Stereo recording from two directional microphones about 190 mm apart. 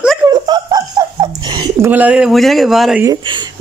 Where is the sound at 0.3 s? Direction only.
20° right (ahead or behind).